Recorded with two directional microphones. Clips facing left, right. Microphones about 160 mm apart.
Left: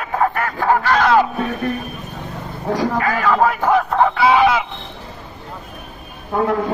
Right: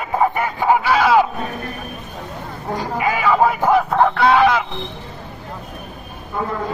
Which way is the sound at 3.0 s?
10° right (ahead or behind).